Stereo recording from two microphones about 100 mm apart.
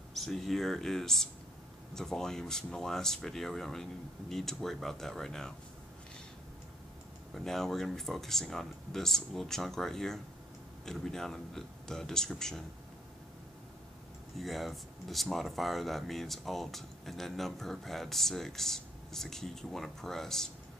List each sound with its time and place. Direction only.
0.1 s speech: centre (ahead or behind)
7.3 s speech: 5° left (ahead or behind)
14.4 s speech: centre (ahead or behind)